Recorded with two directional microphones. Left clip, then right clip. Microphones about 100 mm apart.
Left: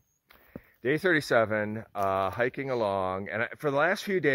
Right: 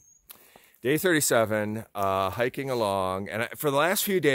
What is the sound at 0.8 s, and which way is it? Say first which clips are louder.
Speech: right 2 dB; 20° right (ahead or behind).